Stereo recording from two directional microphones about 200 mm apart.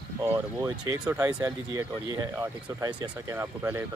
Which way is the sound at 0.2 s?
10° right (ahead or behind).